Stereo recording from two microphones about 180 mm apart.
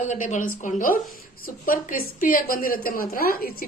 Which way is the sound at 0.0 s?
45° left (ahead or behind).